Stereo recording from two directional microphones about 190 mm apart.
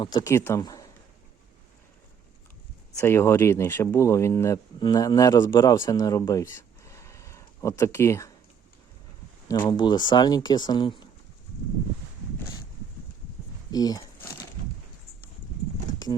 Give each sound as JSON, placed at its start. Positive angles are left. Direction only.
{"t": 0.0, "sound": "speech", "side_deg": 20}
{"t": 3.0, "sound": "speech", "side_deg": 15}
{"t": 9.5, "sound": "speech", "side_deg": 25}
{"t": 13.7, "sound": "a sound", "side_deg": 20}